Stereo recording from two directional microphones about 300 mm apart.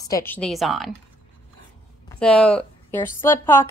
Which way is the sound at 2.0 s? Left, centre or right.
Centre.